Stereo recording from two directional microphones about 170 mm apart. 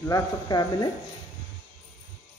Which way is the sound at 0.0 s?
20° left (ahead or behind).